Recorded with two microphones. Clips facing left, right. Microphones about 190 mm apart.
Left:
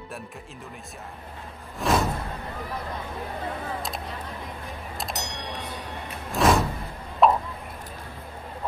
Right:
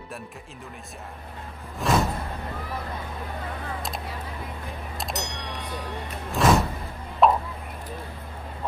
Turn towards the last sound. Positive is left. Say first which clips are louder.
# even
turn(degrees=0)  # may be behind; listen again after turning